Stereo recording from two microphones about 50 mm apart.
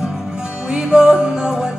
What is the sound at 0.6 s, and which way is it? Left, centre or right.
Music, centre.